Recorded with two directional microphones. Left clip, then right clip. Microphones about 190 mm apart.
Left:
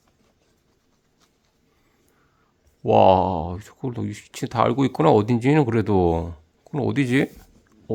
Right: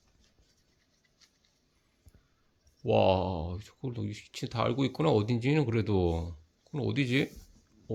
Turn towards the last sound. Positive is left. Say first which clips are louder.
# left 9 dB
turn(degrees=35)  # may be behind; listen again after turning